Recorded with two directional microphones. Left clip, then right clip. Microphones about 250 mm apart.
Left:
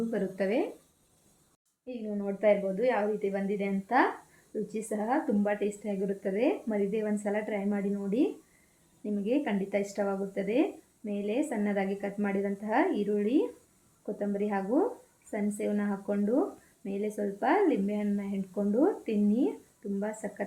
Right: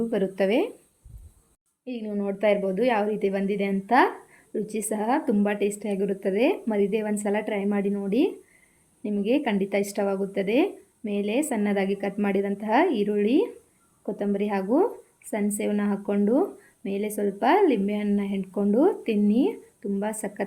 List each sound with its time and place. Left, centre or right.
0.1 s speech: right
1.8 s speech: right